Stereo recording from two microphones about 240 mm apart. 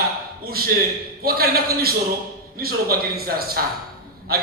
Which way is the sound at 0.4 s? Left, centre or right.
Right.